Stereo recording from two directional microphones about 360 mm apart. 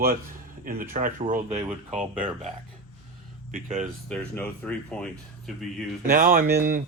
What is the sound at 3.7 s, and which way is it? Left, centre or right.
Speech, centre.